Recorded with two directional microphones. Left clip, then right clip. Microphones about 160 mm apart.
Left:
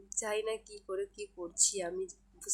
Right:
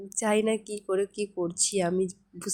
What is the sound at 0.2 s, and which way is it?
A woman's voice, 35° right (ahead or behind).